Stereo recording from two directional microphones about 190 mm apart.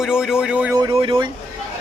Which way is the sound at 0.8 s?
25° right (ahead or behind).